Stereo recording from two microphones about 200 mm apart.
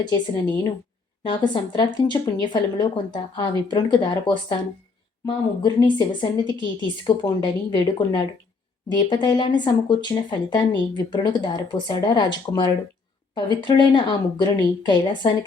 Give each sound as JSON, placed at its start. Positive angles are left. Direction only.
{"t": 0.0, "sound": "speech", "side_deg": 20}